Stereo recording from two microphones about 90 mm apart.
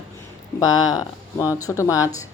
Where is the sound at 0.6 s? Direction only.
45° left (ahead or behind).